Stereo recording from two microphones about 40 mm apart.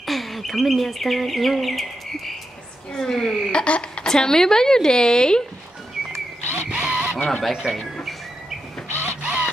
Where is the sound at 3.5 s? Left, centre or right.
Left.